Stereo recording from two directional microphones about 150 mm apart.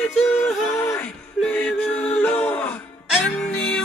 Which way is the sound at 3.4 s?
5° left (ahead or behind).